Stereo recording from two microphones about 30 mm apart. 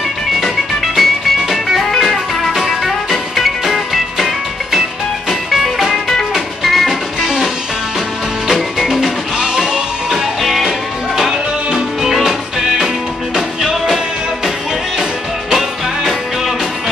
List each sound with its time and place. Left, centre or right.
0.9 s music: centre
5.5 s music: centre
5.9 s music: centre
8.5 s music: centre